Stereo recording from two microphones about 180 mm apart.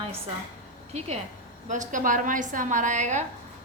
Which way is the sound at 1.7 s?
45° right (ahead or behind).